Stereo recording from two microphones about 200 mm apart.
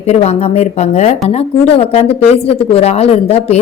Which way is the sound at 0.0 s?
30° left (ahead or behind).